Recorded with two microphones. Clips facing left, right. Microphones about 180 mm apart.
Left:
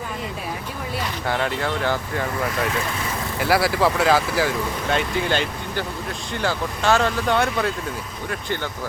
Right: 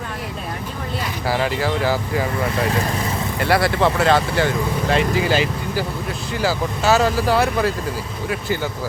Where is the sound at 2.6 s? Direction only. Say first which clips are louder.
Right 4 dB; 35° right (ahead or behind).